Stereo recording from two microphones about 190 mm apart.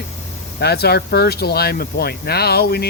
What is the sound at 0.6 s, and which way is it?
Speech, 55° left (ahead or behind).